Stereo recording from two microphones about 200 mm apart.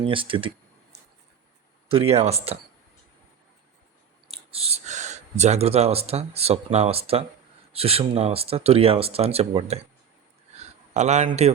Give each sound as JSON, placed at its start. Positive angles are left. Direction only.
{"t": 0.0, "sound": "speech", "side_deg": -25}
{"t": 1.9, "sound": "speech", "side_deg": -30}
{"t": 4.3, "sound": "speech", "side_deg": -30}
{"t": 10.5, "sound": "a sound", "side_deg": -35}